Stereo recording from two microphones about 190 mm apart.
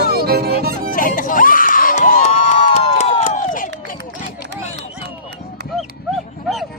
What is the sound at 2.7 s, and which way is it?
Crowd, 35° left (ahead or behind).